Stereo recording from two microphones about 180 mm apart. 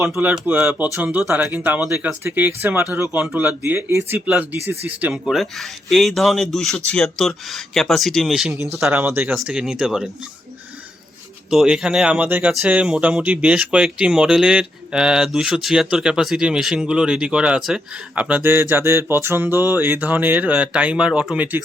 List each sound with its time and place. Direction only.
0.1 s speech: 5° right (ahead or behind)
8.5 s speech: 15° right (ahead or behind)
11.5 s speech: 5° right (ahead or behind)